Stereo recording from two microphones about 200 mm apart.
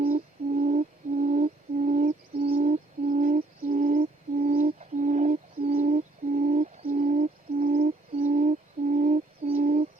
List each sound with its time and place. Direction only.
0.1 s music: 45° right (ahead or behind)
3.7 s bird: 40° right (ahead or behind)